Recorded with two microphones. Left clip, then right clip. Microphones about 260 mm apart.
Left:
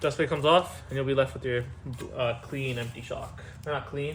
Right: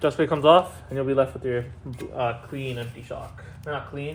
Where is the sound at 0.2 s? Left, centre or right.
Centre.